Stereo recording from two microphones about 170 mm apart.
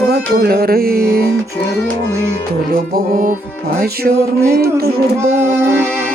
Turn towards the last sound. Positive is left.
turn(degrees=-15)  # may be behind; listen again after turning